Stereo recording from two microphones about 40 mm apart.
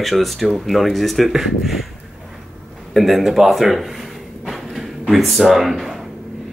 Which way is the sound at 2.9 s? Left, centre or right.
Centre.